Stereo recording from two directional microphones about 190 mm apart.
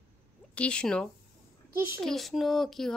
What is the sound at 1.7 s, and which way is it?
Speech, 10° right (ahead or behind).